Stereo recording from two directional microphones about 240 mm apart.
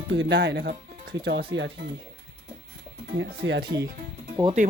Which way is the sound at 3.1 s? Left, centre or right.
Right.